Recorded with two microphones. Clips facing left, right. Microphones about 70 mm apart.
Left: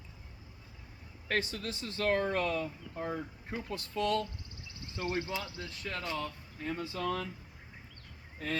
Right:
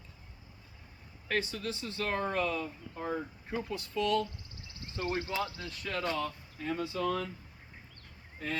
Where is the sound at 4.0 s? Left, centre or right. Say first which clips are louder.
Right 1 dB; left.